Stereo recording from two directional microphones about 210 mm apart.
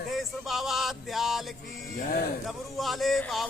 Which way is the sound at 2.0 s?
40° left (ahead or behind).